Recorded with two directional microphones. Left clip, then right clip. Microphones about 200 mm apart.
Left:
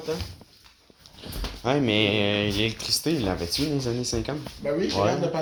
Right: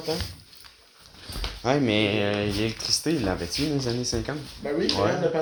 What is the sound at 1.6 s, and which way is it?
Speech, 5° right (ahead or behind).